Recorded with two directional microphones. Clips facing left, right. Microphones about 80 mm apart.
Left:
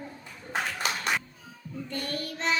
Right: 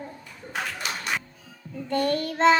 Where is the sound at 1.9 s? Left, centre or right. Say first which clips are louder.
Right 11 dB; right.